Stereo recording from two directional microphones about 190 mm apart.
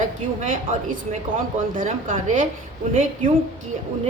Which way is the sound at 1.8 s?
45° right (ahead or behind).